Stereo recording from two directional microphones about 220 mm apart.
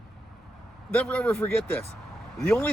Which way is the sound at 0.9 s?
5° left (ahead or behind).